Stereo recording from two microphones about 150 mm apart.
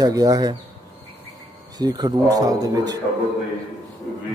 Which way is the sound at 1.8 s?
25° right (ahead or behind).